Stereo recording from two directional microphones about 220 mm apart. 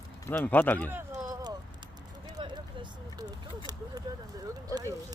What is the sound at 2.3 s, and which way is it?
Vehicle, 20° right (ahead or behind).